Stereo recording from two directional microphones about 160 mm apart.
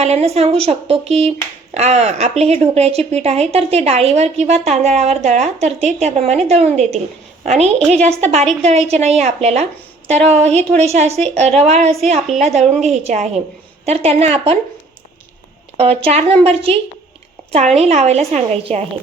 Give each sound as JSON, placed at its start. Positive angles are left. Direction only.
{"t": 0.0, "sound": "a woman's voice", "side_deg": -45}
{"t": 15.8, "sound": "a woman's voice", "side_deg": -40}